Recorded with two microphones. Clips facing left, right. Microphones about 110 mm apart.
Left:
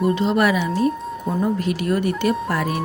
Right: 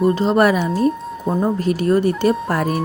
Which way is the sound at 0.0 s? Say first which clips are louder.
Right 3 dB; 40° right (ahead or behind).